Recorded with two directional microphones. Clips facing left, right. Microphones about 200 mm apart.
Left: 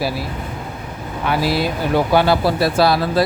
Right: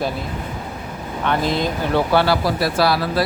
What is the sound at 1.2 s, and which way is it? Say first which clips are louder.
Speech: left 1 dB; 5° left (ahead or behind).